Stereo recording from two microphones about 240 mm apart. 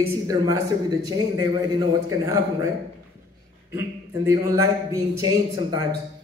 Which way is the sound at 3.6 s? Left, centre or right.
Centre.